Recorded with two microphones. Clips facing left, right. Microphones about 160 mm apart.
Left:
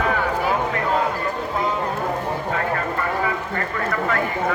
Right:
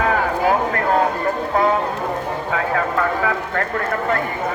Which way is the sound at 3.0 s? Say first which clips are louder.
Right 3 dB; 75° right (ahead or behind).